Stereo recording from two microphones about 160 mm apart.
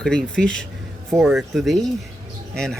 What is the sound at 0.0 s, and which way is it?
Speech, 5° left (ahead or behind).